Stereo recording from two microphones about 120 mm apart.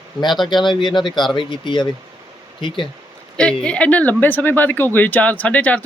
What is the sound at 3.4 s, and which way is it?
Speech, 10° left (ahead or behind).